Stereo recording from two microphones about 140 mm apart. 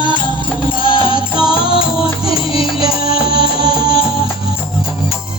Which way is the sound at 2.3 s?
40° left (ahead or behind).